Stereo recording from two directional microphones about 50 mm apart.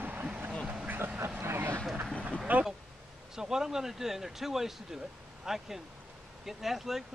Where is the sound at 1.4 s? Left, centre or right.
Right.